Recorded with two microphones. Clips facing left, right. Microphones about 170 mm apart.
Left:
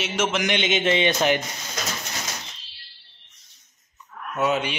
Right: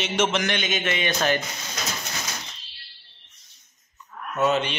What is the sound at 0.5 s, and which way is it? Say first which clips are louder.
Speech: left 5 dB; 25° left (ahead or behind).